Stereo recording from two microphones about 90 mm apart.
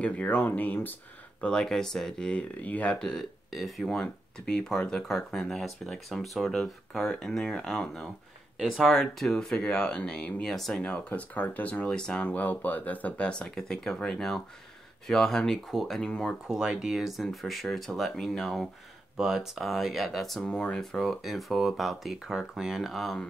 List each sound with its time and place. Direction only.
0.0 s speech: 15° left (ahead or behind)
1.4 s speech: 10° left (ahead or behind)
16.4 s speech: 10° right (ahead or behind)